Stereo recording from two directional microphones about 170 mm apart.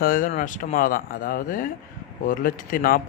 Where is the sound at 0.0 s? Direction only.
55° left (ahead or behind).